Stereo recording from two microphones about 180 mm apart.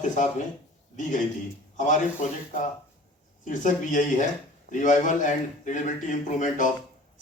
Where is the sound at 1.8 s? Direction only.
45° left (ahead or behind).